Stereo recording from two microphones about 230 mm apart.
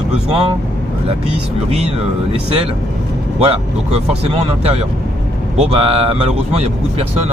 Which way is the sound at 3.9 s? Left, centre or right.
Right.